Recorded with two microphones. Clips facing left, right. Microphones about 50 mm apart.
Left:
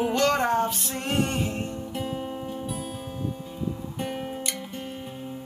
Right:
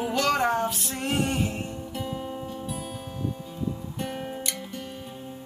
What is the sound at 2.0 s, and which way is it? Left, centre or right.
Music, centre.